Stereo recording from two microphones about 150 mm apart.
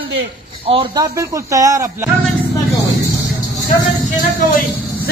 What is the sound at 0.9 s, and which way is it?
Speech, 25° right (ahead or behind).